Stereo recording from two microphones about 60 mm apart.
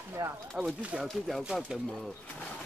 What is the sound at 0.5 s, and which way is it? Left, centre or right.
Speech, centre.